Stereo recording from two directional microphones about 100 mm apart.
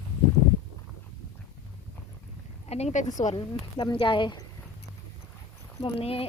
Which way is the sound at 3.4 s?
55° left (ahead or behind).